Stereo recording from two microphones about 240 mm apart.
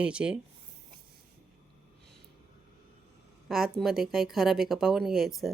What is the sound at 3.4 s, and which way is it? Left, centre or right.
Speech, centre.